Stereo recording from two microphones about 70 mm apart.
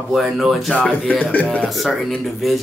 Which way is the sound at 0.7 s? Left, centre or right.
Left.